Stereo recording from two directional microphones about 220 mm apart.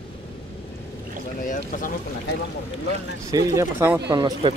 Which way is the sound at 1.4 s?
35° left (ahead or behind).